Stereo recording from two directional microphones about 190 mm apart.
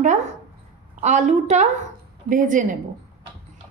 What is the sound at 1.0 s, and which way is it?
A woman's voice, 40° right (ahead or behind).